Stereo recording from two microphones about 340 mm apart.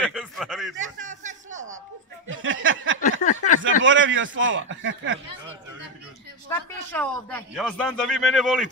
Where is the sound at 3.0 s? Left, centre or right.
Left.